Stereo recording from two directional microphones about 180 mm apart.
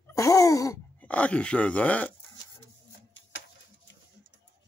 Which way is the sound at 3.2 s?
90° left.